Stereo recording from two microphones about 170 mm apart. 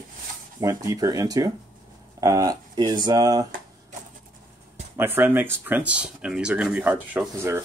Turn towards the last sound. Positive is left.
turn(degrees=-15)  # may be behind; listen again after turning